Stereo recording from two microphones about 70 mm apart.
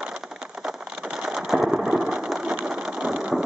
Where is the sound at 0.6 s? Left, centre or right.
Centre.